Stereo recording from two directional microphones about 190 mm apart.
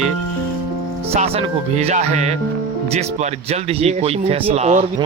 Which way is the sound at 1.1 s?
30° right (ahead or behind).